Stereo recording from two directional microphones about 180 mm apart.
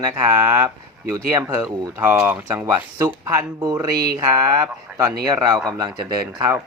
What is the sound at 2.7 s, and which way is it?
Speech, 20° right (ahead or behind).